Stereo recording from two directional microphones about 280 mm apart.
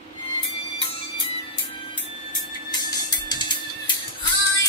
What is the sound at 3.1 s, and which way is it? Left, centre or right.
Music, centre.